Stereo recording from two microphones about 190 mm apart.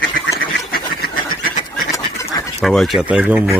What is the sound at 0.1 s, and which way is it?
Duck, 50° left (ahead or behind).